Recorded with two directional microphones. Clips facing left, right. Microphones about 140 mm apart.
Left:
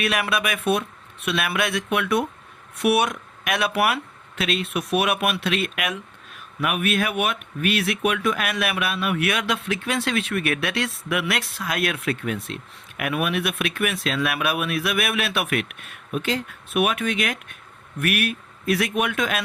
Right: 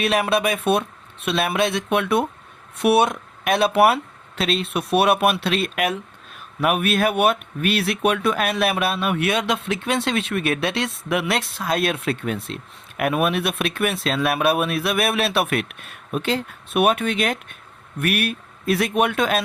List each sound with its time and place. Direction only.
0.0 s speech: 25° right (ahead or behind)